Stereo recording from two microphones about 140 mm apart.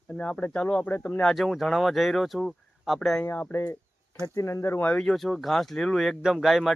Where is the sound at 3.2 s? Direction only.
15° left (ahead or behind); by 6.7 s centre (ahead or behind).